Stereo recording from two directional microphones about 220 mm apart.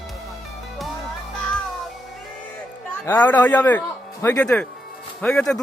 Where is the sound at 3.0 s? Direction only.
10° left (ahead or behind).